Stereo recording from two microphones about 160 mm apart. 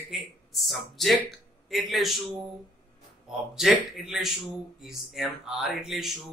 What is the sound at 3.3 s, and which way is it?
Speech, centre (ahead or behind).